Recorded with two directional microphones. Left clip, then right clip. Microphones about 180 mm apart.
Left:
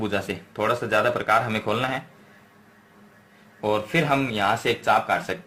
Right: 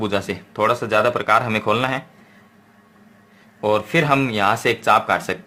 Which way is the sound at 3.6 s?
30° right (ahead or behind).